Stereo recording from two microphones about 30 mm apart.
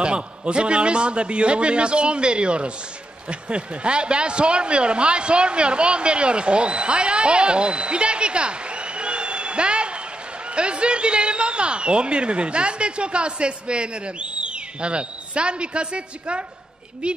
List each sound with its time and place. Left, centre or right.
0.0 s speech: right